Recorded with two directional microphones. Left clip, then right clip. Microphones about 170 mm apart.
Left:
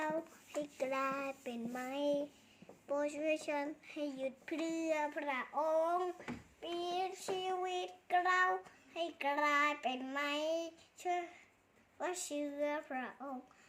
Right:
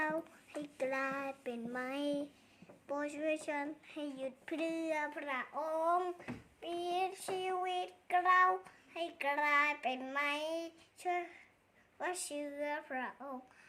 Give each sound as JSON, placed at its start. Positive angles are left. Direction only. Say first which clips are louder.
{"t": 0.6, "sound": "child singing", "louder": "even", "side_deg": -20}
{"t": 1.9, "sound": "a child's voice", "louder": "left 3 dB", "side_deg": -35}
{"t": 2.8, "sound": "a woman's voice", "louder": "left 1 dB", "side_deg": -20}
{"t": 8.9, "sound": "child singing", "louder": "even", "side_deg": -20}